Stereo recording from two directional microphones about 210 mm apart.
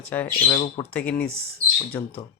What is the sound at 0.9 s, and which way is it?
Speech, 5° left (ahead or behind).